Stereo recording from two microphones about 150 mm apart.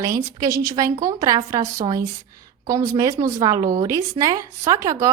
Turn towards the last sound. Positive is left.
turn(degrees=-20)  # may be behind; listen again after turning